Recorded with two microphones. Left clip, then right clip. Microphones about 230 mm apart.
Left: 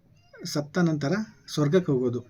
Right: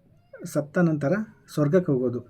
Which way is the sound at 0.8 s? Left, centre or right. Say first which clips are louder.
Right 3 dB; centre.